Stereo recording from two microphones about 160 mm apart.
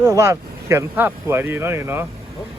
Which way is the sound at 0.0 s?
15° right (ahead or behind).